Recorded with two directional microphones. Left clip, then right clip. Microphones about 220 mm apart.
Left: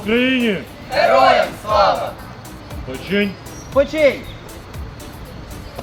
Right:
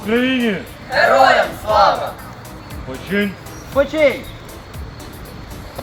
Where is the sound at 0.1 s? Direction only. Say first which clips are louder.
Left 1 dB; 15° left (ahead or behind).